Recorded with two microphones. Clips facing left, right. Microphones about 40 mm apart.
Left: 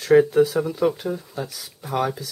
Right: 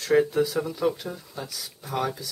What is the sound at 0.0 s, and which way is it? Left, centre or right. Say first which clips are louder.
Speech: left 6 dB; centre.